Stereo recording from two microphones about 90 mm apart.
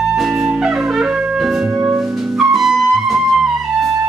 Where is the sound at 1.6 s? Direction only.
20° right (ahead or behind).